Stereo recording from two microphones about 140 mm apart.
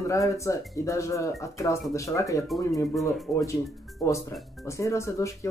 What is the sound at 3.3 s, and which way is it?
Speech, 20° left (ahead or behind).